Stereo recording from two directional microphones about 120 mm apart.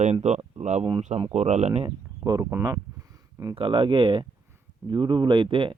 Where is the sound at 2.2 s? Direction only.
25° right (ahead or behind).